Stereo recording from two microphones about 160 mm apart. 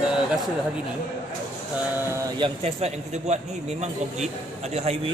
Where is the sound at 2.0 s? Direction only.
20° right (ahead or behind).